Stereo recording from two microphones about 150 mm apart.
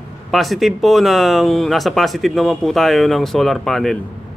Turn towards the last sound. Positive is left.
turn(degrees=0)  # may be behind; listen again after turning